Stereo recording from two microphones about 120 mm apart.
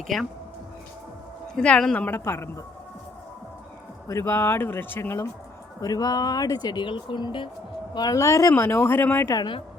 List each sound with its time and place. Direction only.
0.1 s speech: 5° left (ahead or behind)
1.5 s a woman's voice: 5° left (ahead or behind)
2.0 s speech: 20° left (ahead or behind)
4.1 s speech: 20° left (ahead or behind); by 7.5 s 40° left (ahead or behind)
7.9 s speech: 30° left (ahead or behind)
9.4 s speech: 45° left (ahead or behind)